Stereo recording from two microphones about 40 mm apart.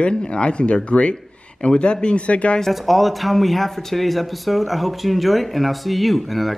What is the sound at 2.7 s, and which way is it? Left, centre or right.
Speech, centre.